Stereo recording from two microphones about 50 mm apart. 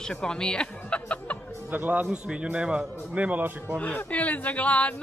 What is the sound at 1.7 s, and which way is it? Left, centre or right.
Speech, right.